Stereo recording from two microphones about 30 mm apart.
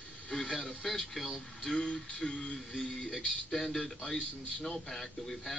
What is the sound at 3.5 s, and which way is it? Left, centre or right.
A man's voice, centre.